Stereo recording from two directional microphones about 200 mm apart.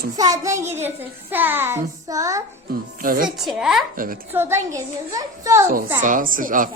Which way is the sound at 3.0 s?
45° right (ahead or behind).